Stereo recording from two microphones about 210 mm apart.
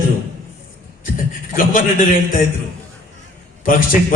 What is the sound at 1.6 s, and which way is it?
Speech, 40° left (ahead or behind).